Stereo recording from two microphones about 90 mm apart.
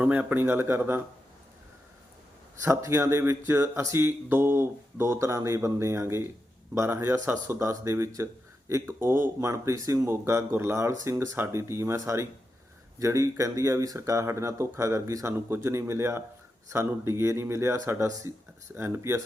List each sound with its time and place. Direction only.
0.0 s speech: 20° right (ahead or behind)
2.6 s speech: 30° right (ahead or behind)